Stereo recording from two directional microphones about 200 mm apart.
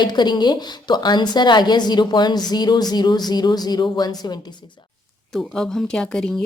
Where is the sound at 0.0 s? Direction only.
20° left (ahead or behind).